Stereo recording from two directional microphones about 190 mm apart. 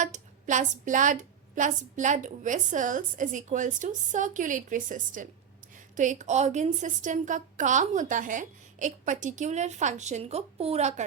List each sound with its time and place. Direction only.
0.0 s a woman's voice: 40° right (ahead or behind)